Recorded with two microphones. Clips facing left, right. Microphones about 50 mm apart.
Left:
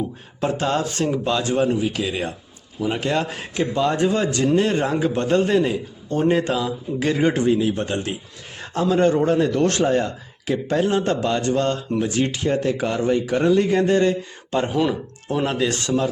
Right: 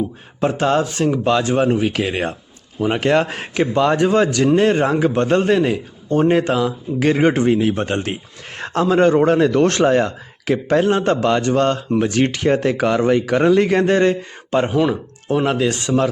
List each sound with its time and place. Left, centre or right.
0.3 s a man's voice: right
2.0 s a man's voice: right
7.0 s speech: right
8.9 s speech: right
10.7 s a man's voice: right
12.5 s a man's voice: right
14.7 s speech: centre